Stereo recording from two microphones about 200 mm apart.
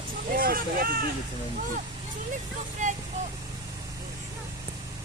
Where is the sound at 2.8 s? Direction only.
40° right (ahead or behind).